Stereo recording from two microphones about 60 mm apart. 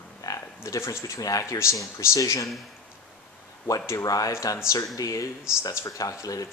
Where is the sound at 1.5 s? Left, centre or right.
Left.